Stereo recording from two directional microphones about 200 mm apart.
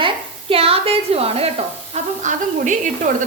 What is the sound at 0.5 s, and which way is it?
Speech, 30° right (ahead or behind).